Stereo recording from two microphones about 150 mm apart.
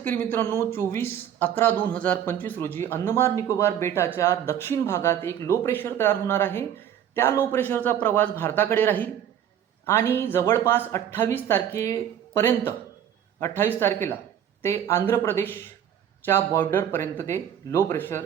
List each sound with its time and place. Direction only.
0.0 s speech: 15° left (ahead or behind)